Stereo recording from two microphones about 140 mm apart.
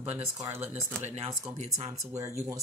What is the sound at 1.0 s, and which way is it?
Speech, 50° right (ahead or behind).